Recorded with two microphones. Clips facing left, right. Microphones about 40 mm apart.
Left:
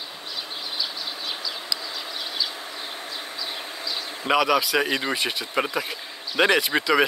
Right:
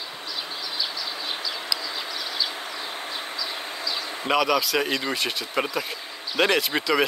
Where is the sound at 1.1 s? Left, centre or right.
Right.